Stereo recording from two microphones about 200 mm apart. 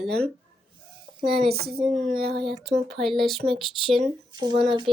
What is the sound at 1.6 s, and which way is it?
Speech, 50° right (ahead or behind).